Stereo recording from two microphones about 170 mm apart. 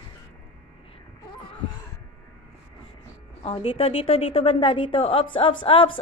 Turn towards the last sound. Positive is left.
turn(degrees=30)  # may be behind; listen again after turning